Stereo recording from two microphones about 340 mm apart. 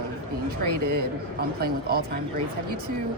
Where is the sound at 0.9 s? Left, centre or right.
Right.